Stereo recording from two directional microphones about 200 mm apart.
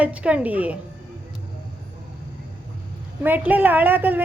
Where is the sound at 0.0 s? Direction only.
5° right (ahead or behind).